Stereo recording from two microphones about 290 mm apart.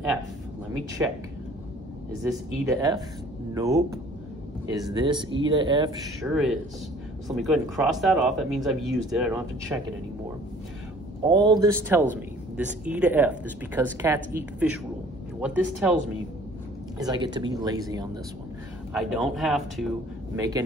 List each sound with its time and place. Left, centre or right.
1.0 s speech: centre
2.6 s speech: centre
6.2 s speech: centre
11.2 s speech: centre
17.0 s speech: centre
18.9 s speech: centre
20.3 s speech: centre